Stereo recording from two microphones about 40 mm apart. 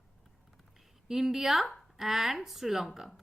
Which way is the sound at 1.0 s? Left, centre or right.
Centre.